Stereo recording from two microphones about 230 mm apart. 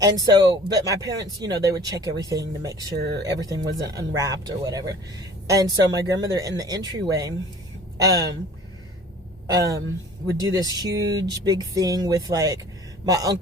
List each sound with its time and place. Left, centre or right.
0.0 s speech: centre
2.9 s speech: right
3.2 s speech: centre
9.5 s speech: centre